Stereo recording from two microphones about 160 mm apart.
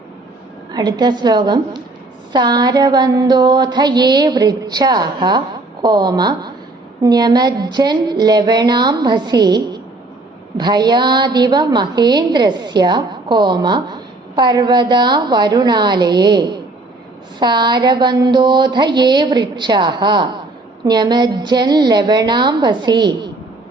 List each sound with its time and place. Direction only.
0.7 s a woman's voice: 25° right (ahead or behind)